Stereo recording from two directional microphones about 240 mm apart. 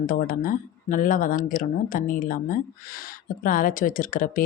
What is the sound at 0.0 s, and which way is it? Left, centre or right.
Speech, left.